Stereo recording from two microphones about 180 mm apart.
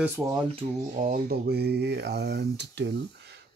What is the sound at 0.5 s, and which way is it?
Speech, 40° right (ahead or behind).